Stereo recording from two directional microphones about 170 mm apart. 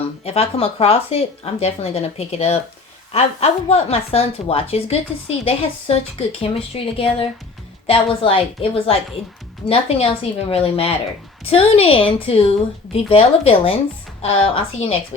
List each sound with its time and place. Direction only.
0.3 s speech: 35° left (ahead or behind)